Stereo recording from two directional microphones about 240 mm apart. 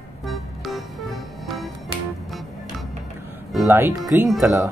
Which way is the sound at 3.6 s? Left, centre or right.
Centre.